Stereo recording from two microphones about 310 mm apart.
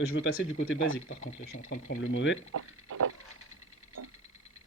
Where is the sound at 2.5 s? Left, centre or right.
Right.